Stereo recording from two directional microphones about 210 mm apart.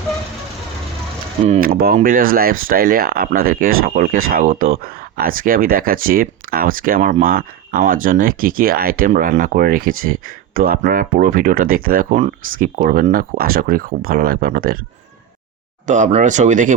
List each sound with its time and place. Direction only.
1.6 s speech: 45° right (ahead or behind)
15.9 s speech: 35° right (ahead or behind)